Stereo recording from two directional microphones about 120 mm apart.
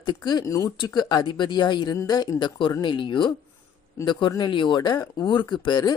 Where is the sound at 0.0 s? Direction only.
35° left (ahead or behind).